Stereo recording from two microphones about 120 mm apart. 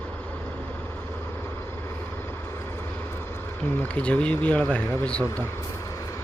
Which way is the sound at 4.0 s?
10° left (ahead or behind).